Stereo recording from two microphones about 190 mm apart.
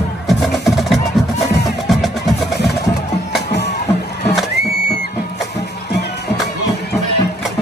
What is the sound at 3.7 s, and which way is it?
Music, 35° left (ahead or behind).